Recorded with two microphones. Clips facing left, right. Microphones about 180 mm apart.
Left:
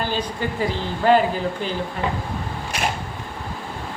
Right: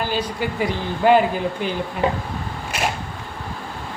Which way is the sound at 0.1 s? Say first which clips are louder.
Right 1 dB; 10° right (ahead or behind).